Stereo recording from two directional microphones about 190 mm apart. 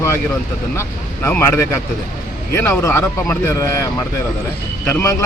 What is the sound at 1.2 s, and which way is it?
Speech, 15° left (ahead or behind).